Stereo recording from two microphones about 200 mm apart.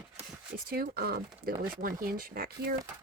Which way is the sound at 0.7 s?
50° right (ahead or behind).